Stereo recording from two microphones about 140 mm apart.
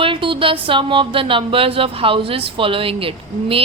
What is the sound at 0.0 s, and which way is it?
Speech, 40° right (ahead or behind).